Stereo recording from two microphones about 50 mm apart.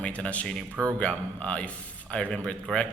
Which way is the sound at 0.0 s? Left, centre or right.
Left.